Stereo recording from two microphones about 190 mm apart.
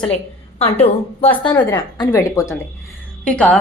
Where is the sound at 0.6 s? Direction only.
30° left (ahead or behind).